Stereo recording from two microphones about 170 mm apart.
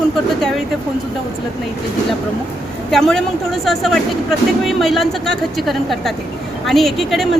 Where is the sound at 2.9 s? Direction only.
5° left (ahead or behind).